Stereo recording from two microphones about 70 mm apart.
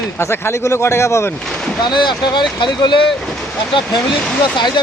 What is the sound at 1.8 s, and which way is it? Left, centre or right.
Speech, left.